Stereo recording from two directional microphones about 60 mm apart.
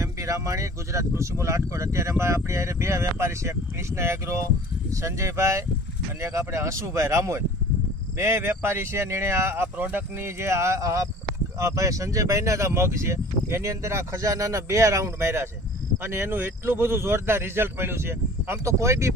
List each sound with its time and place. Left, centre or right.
0.0 s speech: right
9.7 s speech: right
16.0 s speech: right